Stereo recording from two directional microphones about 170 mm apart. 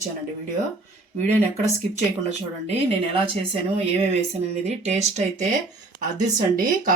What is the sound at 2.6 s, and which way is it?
Speech, 35° right (ahead or behind).